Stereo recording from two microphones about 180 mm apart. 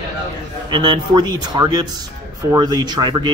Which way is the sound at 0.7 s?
25° right (ahead or behind).